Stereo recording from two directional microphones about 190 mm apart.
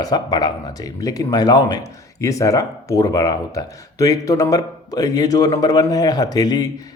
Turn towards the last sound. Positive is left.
turn(degrees=20)  # may be behind; listen again after turning